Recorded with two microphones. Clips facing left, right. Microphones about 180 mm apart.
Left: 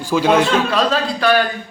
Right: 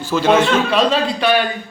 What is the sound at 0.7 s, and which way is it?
Speech, 15° right (ahead or behind).